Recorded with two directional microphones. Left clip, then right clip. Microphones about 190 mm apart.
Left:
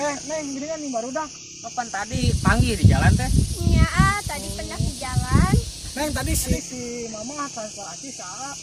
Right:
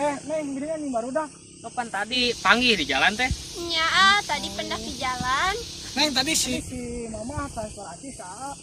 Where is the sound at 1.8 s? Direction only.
15° right (ahead or behind).